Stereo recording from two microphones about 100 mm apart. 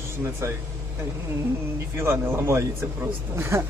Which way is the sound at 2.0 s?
25° right (ahead or behind).